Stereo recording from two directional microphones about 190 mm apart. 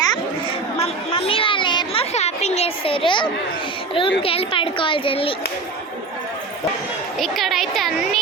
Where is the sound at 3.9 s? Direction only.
25° left (ahead or behind).